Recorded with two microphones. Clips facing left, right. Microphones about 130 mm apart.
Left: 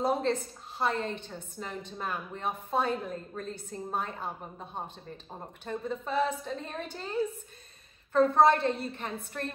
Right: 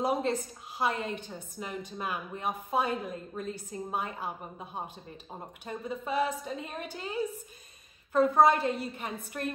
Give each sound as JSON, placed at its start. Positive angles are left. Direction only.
{"t": 0.0, "sound": "a woman's voice", "side_deg": -10}